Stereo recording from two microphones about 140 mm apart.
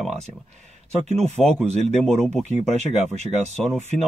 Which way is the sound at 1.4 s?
5° left (ahead or behind).